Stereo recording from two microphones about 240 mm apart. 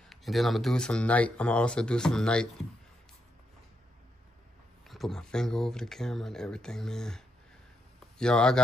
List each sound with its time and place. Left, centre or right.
0.1 s speech: centre
4.8 s speech: centre